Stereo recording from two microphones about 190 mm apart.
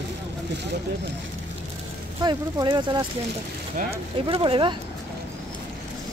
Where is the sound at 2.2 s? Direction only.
25° right (ahead or behind).